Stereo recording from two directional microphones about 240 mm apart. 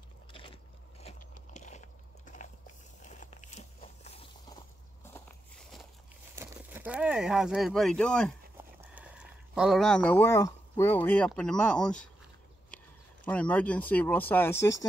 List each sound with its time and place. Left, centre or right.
0.3 s biting: left
5.1 s walk: centre
6.3 s speech: centre
8.5 s speech: centre